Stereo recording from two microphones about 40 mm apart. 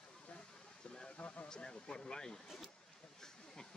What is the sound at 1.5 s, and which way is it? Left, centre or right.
Speech, centre.